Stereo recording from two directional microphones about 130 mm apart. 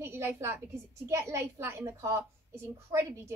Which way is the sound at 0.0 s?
20° right (ahead or behind).